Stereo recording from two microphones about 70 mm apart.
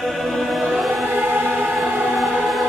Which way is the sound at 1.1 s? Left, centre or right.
Right.